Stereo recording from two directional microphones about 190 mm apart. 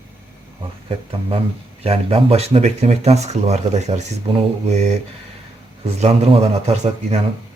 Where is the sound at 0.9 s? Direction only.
30° right (ahead or behind).